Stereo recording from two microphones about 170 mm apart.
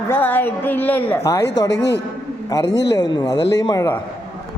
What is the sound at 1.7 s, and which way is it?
Speech, 85° left.